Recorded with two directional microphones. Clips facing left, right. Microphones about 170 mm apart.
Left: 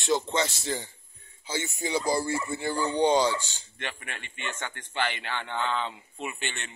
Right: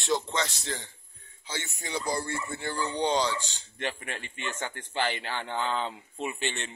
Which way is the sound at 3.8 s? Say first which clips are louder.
Right 4 dB; 35° right (ahead or behind).